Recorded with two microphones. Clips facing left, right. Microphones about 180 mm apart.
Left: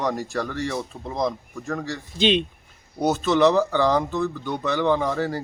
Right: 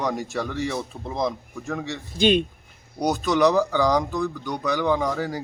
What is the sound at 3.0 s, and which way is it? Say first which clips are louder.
Speech: left 1 dB; 15° right (ahead or behind).